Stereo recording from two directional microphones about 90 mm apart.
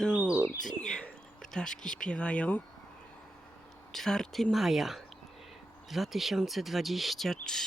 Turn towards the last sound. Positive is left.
turn(degrees=5)  # may be behind; listen again after turning